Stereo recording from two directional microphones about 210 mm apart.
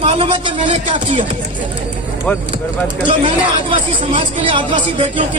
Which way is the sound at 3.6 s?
25° right (ahead or behind).